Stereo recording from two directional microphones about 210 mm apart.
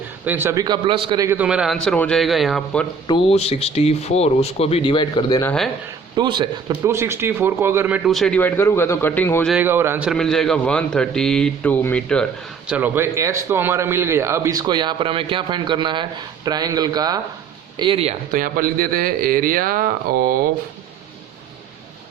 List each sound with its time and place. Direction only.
0.3 s a man's voice: 10° right (ahead or behind)
3.1 s speech: 25° left (ahead or behind)
6.1 s a man's voice: 20° right (ahead or behind); by 9.5 s 10° left (ahead or behind)
9.5 s a man's voice: 10° right (ahead or behind)
10.1 s a man's voice: centre (ahead or behind)
12.7 s a man's voice: 10° right (ahead or behind); by 18.1 s 25° right (ahead or behind)
18.3 s a man's voice: 40° right (ahead or behind)